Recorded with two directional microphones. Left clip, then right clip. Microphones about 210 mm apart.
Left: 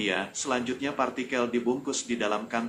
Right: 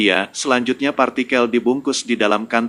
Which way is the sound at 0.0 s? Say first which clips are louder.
Right 12 dB; 45° right (ahead or behind).